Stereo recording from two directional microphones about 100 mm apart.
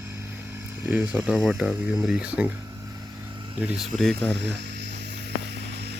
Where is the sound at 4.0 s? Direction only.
5° left (ahead or behind).